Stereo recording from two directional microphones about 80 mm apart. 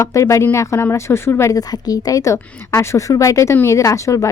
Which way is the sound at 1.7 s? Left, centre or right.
Left.